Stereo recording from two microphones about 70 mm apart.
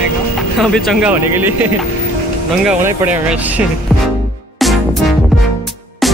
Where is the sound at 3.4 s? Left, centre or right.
Right.